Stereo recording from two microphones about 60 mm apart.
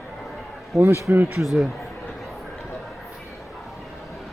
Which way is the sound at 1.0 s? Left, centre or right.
Right.